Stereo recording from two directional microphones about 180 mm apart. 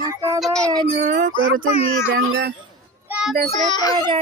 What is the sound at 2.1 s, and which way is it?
Speech, 90° right.